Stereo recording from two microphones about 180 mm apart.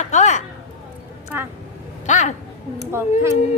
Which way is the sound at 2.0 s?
40° left (ahead or behind).